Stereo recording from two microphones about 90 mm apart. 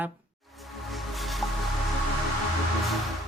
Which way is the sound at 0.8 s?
Centre (ahead or behind).